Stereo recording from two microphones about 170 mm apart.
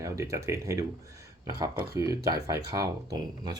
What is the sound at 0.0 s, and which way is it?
Speech, 20° right (ahead or behind).